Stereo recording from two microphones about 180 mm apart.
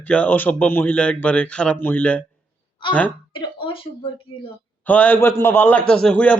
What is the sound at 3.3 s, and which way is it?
Speech, 30° left (ahead or behind).